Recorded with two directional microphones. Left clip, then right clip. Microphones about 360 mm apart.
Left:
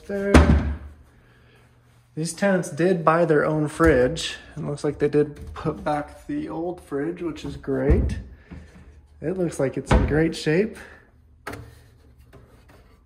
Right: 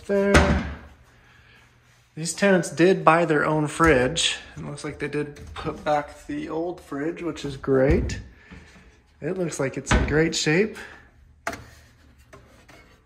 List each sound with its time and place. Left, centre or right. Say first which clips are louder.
0.0 s speech: right 5 dB; centre
2.1 s speech: right 2 dB; centre
9.2 s speech: left 2 dB; centre